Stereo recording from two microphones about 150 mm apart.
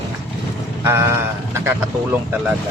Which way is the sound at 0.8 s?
15° right (ahead or behind).